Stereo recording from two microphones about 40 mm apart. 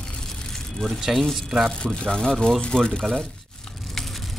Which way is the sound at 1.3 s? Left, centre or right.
Centre.